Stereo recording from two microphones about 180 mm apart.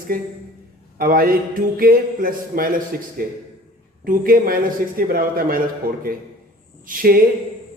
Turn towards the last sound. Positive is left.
turn(degrees=-50)  # may be behind; listen again after turning